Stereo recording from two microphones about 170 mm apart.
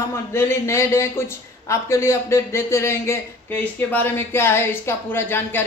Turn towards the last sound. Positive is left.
turn(degrees=15)  # may be behind; listen again after turning